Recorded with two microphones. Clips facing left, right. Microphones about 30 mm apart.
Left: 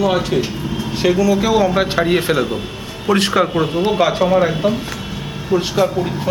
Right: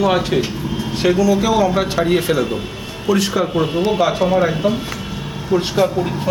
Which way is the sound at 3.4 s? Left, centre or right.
Centre.